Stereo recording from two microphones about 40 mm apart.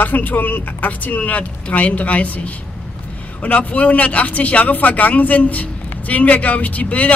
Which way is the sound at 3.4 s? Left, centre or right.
Left.